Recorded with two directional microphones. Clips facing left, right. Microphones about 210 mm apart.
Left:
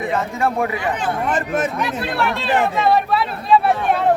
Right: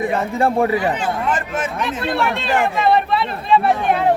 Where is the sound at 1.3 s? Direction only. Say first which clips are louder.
Left 2 dB; 40° left (ahead or behind).